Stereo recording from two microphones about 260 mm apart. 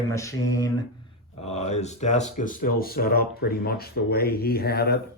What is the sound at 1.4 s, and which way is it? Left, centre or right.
Speech, left.